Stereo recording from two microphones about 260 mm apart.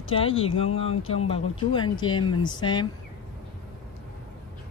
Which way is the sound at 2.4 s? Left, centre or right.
Centre.